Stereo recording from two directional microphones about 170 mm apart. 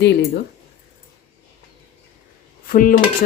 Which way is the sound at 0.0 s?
80° left.